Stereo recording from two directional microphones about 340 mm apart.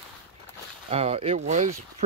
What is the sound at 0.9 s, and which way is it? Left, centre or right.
Speech, centre.